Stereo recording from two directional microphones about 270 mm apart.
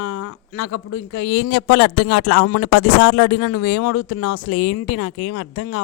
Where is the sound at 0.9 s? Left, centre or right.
Left.